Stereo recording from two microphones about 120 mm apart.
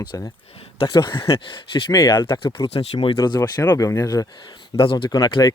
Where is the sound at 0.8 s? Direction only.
40° left (ahead or behind).